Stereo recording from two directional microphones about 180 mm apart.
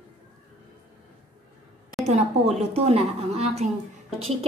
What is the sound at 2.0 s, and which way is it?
A woman's voice, 40° right (ahead or behind).